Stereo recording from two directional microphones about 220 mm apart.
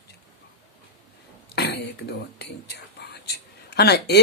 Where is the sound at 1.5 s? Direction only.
50° left (ahead or behind).